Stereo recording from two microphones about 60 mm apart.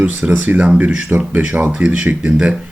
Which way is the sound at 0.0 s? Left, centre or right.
Right.